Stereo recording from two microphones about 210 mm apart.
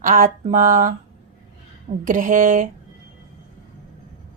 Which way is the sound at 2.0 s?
40° right (ahead or behind).